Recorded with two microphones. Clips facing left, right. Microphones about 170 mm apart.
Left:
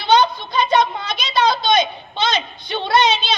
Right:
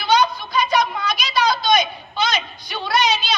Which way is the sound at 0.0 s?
25° left (ahead or behind).